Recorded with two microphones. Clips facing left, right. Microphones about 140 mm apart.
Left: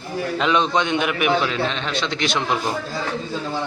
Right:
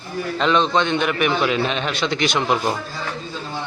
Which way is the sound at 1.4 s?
10° right (ahead or behind).